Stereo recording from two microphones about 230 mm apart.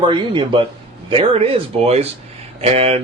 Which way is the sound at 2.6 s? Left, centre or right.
Right.